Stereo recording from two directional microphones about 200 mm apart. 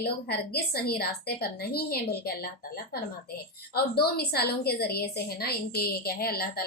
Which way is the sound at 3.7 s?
50° left (ahead or behind).